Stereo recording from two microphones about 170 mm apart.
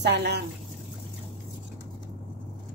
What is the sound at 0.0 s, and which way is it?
Speech, 80° right.